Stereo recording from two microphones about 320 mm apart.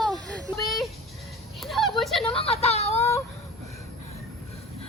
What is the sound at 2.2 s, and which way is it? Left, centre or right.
Speech, centre.